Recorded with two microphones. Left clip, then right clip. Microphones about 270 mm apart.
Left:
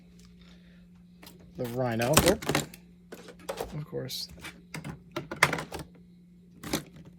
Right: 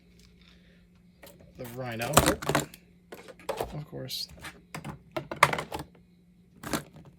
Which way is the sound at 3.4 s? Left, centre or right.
Right.